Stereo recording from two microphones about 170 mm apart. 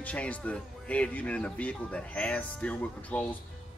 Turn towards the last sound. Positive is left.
turn(degrees=5)  # may be behind; listen again after turning